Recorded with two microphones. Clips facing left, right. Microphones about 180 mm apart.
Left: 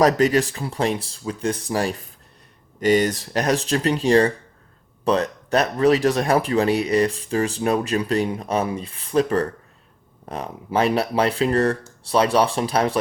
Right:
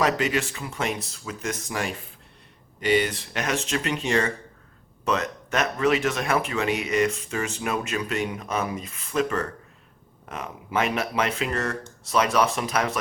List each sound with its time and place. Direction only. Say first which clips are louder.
0.0 s speech: left 7 dB; 40° left (ahead or behind)